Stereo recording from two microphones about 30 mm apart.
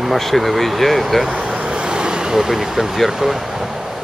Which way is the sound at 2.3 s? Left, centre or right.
Centre.